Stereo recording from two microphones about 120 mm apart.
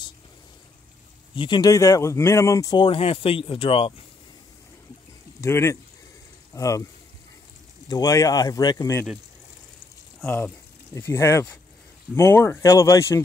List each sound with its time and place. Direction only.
1.3 s speech: 40° left (ahead or behind)
2.8 s speech: 50° left (ahead or behind)
5.4 s speech: 25° left (ahead or behind)
7.9 s speech: 30° left (ahead or behind)
11.0 s speech: 20° left (ahead or behind)